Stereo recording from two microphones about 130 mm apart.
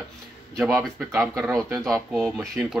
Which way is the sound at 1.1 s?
25° right (ahead or behind).